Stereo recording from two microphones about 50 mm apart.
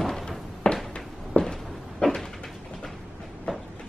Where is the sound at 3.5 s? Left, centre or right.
Centre.